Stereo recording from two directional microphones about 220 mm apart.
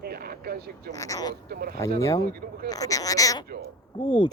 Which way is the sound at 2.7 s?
15° left (ahead or behind).